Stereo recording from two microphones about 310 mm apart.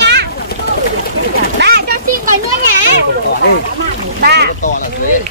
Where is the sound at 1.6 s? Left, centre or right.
Right.